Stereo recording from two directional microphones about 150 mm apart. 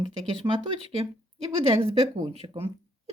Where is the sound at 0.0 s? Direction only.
35° right (ahead or behind).